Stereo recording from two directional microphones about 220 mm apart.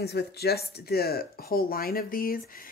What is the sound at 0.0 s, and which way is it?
Speech, 50° left (ahead or behind).